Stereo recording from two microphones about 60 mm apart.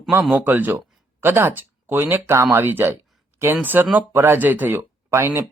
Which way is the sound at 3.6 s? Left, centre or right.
Right.